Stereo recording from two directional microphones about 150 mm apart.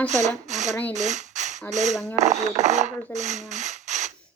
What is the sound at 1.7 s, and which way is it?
Speech, 50° right (ahead or behind).